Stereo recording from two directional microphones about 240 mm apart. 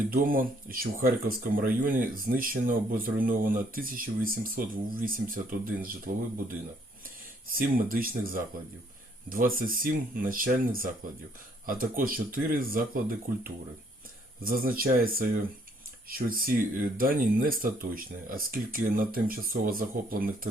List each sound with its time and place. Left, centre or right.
0.1 s speech: right
7.5 s speech: right
9.6 s speech: right